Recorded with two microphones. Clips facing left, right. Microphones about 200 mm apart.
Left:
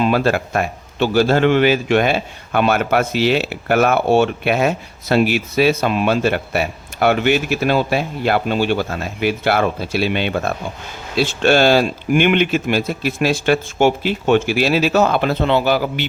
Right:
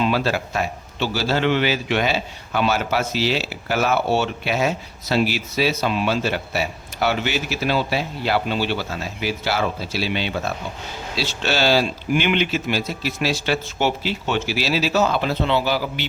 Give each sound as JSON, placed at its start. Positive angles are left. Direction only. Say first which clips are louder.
{"t": 0.0, "sound": "a man's voice", "louder": "left 4 dB", "side_deg": 50}